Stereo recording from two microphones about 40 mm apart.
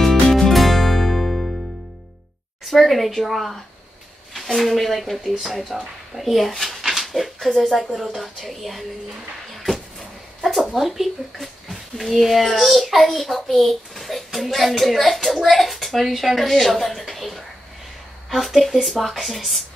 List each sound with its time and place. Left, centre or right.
0.0 s music: centre
2.6 s speech: centre